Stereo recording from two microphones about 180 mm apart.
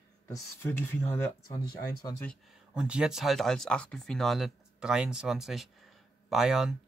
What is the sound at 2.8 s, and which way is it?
Speech, 5° right (ahead or behind).